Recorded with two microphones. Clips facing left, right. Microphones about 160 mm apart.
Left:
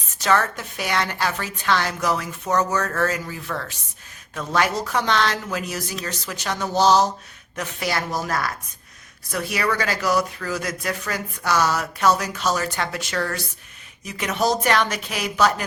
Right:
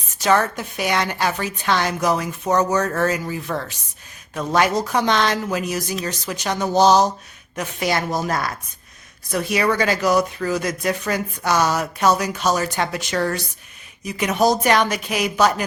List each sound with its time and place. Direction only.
0.2 s a woman's voice: 15° right (ahead or behind)